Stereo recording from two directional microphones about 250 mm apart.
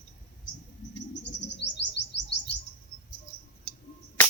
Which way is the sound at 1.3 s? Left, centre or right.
Left.